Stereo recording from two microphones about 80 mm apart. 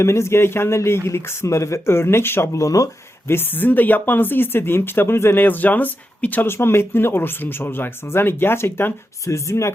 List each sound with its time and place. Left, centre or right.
0.0 s speech: left
3.2 s speech: left